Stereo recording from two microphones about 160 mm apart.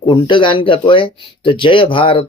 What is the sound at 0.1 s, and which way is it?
Speech, 30° left (ahead or behind).